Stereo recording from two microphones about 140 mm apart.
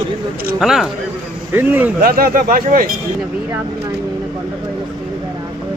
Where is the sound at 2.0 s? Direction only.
90° right.